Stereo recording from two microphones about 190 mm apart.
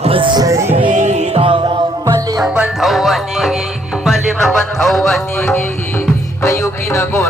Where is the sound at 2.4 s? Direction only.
Centre (ahead or behind); by 7.2 s 15° left (ahead or behind).